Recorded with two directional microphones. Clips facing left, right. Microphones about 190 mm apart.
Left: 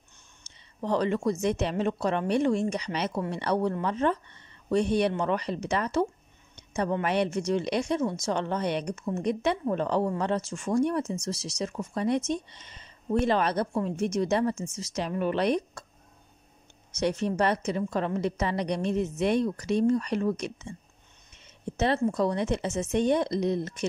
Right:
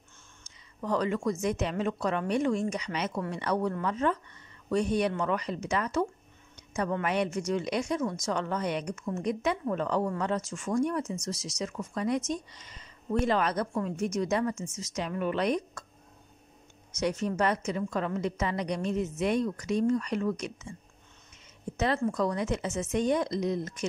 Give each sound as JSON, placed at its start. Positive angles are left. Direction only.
{"t": 0.7, "sound": "a woman's voice", "side_deg": 30}
{"t": 5.2, "sound": "a woman's voice", "side_deg": 30}
{"t": 16.9, "sound": "a woman's voice", "side_deg": 30}
{"t": 21.7, "sound": "a woman's voice", "side_deg": 30}